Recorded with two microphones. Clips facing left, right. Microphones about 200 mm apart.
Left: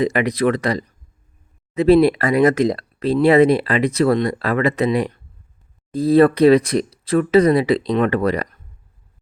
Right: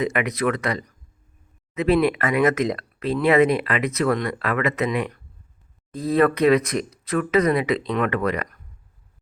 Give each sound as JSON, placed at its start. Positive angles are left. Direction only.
{"t": 0.0, "sound": "speech", "side_deg": 35}